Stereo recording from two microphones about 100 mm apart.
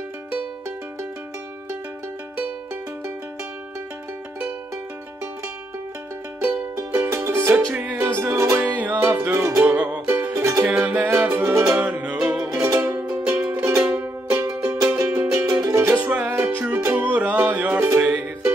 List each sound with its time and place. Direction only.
6.4 s music: 25° right (ahead or behind)
13.7 s music: 25° right (ahead or behind)
15.9 s music: 15° right (ahead or behind)
17.7 s music: 25° right (ahead or behind)
18.0 s music: 15° right (ahead or behind)